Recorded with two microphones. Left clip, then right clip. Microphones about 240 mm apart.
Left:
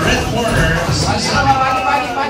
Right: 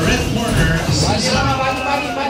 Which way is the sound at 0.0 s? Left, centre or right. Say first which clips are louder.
Left 3 dB; centre.